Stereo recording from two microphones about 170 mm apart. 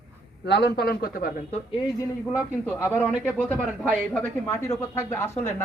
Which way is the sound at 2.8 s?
10° left (ahead or behind).